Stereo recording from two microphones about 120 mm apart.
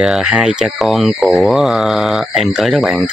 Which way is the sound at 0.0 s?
5° right (ahead or behind).